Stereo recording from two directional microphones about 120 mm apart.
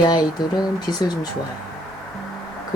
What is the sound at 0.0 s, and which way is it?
Speech, 35° left (ahead or behind).